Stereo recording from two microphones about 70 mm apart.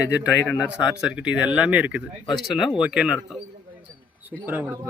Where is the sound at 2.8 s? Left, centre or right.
Centre.